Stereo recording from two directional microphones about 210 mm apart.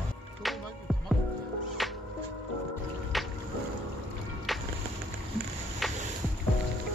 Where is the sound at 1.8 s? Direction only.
Centre (ahead or behind).